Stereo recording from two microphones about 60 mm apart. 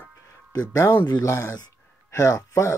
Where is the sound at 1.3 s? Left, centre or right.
Left.